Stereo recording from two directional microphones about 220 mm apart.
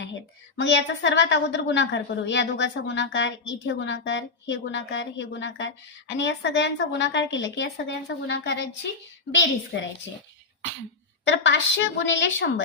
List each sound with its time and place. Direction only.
0.5 s a woman's voice: 55° left (ahead or behind)
11.3 s a woman's voice: 55° left (ahead or behind)